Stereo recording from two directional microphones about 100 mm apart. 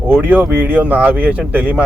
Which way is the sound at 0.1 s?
15° right (ahead or behind).